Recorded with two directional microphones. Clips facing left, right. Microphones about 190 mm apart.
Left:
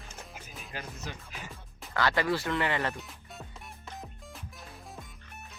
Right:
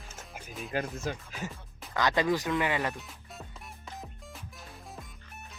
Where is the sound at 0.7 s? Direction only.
50° right (ahead or behind).